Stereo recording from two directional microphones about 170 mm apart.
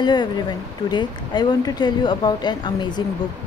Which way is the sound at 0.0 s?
25° left (ahead or behind).